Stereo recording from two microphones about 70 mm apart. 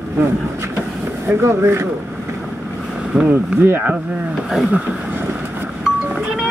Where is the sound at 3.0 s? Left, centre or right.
Centre.